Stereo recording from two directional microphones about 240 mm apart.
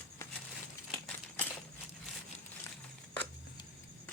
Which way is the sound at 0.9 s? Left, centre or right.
Centre.